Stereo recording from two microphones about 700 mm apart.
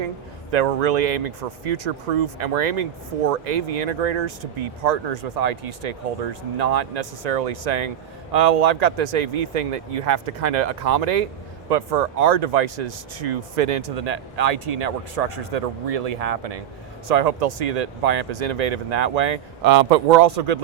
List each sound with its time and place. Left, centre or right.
0.5 s speech: right